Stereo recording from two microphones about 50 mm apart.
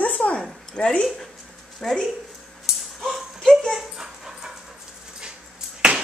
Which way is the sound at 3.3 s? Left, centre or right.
Centre.